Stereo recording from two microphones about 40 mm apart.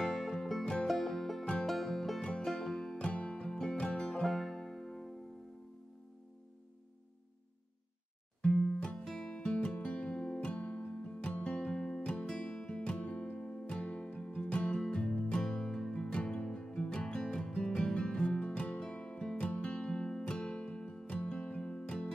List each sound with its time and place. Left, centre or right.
0.0 s music: centre
3.1 s music: left
4.1 s music: centre
8.4 s music: left
9.4 s music: left
13.4 s music: centre
13.7 s music: left
15.6 s music: centre
15.9 s music: left
18.8 s music: centre